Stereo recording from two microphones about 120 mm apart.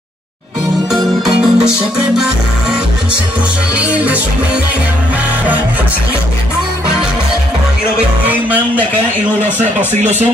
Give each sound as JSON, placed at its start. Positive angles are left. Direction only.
{"t": 1.2, "sound": "music", "side_deg": -5}
{"t": 3.7, "sound": "speech", "side_deg": -10}
{"t": 8.3, "sound": "music", "side_deg": -15}